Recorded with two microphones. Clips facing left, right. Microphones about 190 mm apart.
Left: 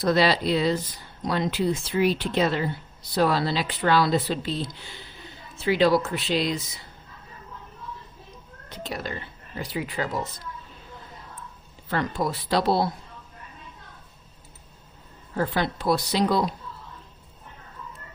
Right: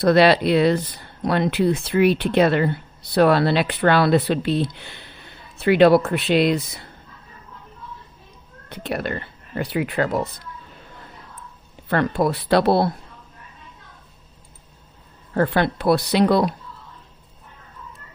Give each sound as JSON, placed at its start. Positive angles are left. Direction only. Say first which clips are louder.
{"t": 0.0, "sound": "speech", "louder": "right 6 dB", "side_deg": -65}
{"t": 8.7, "sound": "speech", "louder": "right 7 dB", "side_deg": -60}
{"t": 11.9, "sound": "speech", "louder": "right 6 dB", "side_deg": -60}
{"t": 15.4, "sound": "speech", "louder": "right 6 dB", "side_deg": -60}